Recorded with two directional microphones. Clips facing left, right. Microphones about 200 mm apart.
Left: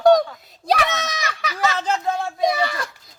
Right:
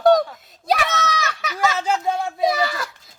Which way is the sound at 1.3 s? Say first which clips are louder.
Right 1 dB; centre (ahead or behind).